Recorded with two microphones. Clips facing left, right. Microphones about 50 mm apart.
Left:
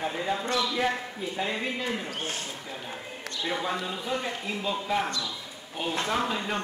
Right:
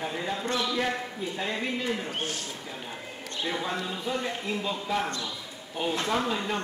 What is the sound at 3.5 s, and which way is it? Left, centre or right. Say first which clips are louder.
A man's voice: left 1 dB; centre.